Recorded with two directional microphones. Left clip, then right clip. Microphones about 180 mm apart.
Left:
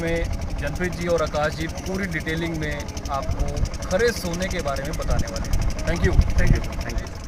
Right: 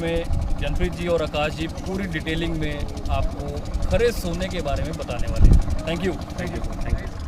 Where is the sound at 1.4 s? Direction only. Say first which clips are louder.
Left 1 dB; 15° right (ahead or behind).